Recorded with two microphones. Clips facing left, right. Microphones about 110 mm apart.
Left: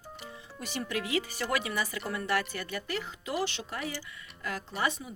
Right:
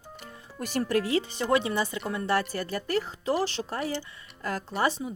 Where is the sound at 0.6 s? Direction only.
45° right (ahead or behind).